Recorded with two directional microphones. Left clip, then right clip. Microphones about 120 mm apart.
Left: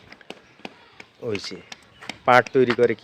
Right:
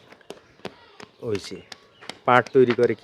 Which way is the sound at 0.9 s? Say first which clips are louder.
Even; 10° right (ahead or behind).